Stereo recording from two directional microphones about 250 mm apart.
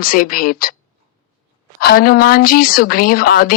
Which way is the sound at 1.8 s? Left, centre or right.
Left.